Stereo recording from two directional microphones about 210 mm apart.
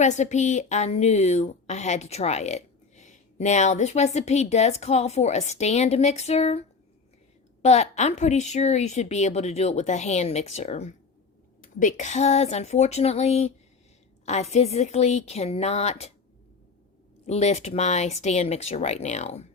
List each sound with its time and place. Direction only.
0.0 s a woman's voice: 35° left (ahead or behind)
17.2 s a woman's voice: 30° left (ahead or behind)